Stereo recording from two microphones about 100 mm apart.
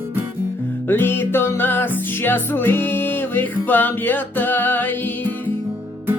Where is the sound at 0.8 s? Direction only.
20° left (ahead or behind).